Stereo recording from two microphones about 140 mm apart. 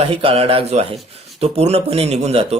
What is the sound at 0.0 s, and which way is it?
Speech, 45° right (ahead or behind).